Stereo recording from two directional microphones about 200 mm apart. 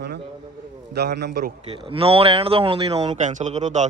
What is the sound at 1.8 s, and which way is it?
A man's voice, 25° right (ahead or behind).